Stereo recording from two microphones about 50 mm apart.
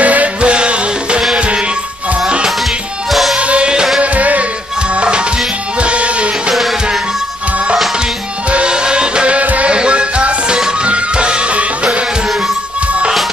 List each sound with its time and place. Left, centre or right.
0.0 s music: right
3.1 s music: centre
3.3 s music: right
4.0 s music: right
5.8 s music: right
8.5 s music: right